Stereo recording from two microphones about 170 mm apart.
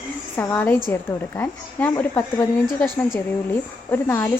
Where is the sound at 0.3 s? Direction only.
10° left (ahead or behind).